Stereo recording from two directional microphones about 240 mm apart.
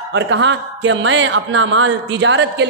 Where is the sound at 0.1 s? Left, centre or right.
Right.